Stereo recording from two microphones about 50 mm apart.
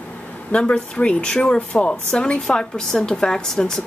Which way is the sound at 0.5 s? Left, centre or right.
Left.